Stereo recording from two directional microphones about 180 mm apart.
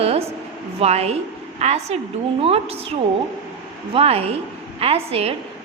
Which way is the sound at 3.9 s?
35° right (ahead or behind).